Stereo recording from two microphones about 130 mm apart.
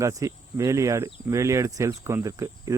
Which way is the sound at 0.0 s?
25° right (ahead or behind).